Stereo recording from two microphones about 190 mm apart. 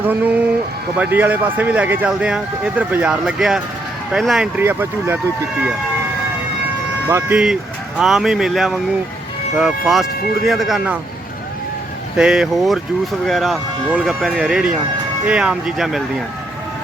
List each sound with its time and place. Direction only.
0.0 s a man's voice: 10° right (ahead or behind)
7.3 s speech: 5° right (ahead or behind)
12.1 s speech: 5° right (ahead or behind)